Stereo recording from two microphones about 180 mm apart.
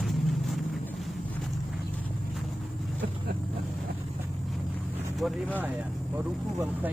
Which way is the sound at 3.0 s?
65° right (ahead or behind).